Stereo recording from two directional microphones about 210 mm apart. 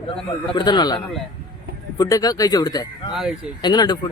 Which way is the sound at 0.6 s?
20° left (ahead or behind).